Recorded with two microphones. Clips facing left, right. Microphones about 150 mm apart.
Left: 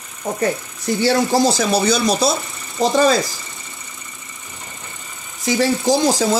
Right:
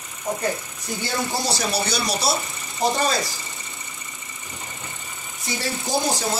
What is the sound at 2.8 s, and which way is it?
Speech, 90° left.